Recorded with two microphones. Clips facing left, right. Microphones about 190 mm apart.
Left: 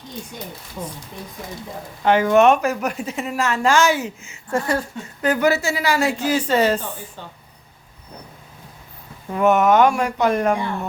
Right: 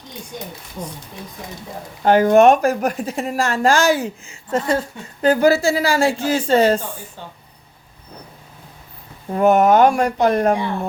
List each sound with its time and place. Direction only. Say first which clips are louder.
2.0 s speech: right 3 dB; 40° right (ahead or behind)
3.5 s speech: right 1 dB; 35° right (ahead or behind)
4.4 s a woman's voice: right 2 dB; 20° right (ahead or behind)
9.3 s speech: right 2 dB; 35° right (ahead or behind)